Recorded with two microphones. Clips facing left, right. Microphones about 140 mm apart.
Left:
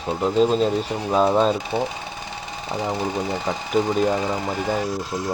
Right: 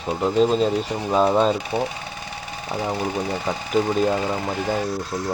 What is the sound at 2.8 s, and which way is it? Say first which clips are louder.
Speech: even; 20° left (ahead or behind).